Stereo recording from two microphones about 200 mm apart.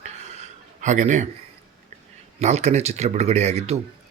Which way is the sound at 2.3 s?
35° right (ahead or behind).